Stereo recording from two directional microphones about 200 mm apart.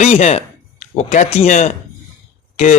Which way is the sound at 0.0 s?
35° left (ahead or behind).